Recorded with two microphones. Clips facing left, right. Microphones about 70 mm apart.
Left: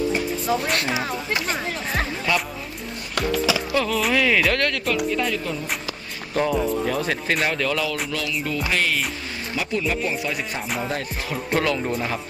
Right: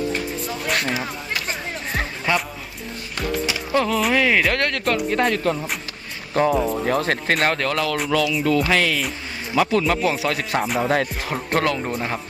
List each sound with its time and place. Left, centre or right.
0.1 s speech: centre
2.0 s speech: centre
3.7 s music: right
4.1 s speech: centre
4.5 s speech: right
5.1 s speech: right
6.3 s music: right
6.8 s speech: right
7.9 s music: centre
9.6 s music: right
10.8 s music: right
11.3 s music: right